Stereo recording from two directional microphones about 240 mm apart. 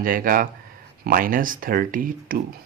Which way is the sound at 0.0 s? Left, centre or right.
Right.